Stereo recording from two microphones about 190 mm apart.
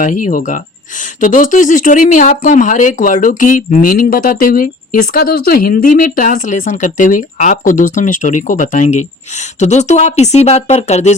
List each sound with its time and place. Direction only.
0.0 s speech: 45° left (ahead or behind)